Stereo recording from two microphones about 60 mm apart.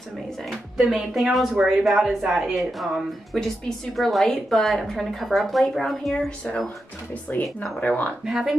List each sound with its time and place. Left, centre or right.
0.7 s a woman's voice: centre
6.1 s speech: centre
7.3 s speech: left
8.3 s a woman's voice: centre